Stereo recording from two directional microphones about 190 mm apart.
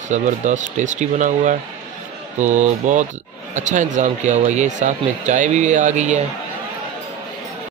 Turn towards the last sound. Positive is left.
turn(degrees=-40)  # may be behind; listen again after turning